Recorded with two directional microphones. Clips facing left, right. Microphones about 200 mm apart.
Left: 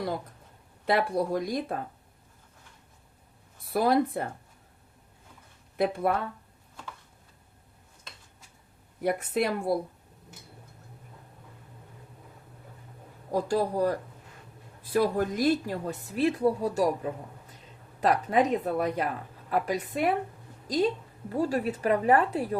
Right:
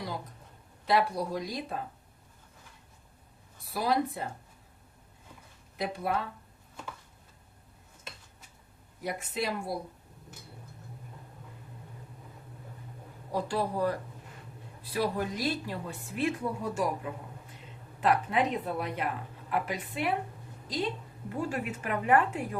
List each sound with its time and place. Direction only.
0.9 s speech: 55° left (ahead or behind)
3.7 s speech: 55° left (ahead or behind)
5.7 s speech: 55° left (ahead or behind)
9.0 s speech: 55° left (ahead or behind)
13.3 s a woman's voice: 40° left (ahead or behind)
21.2 s a woman's voice: 40° left (ahead or behind)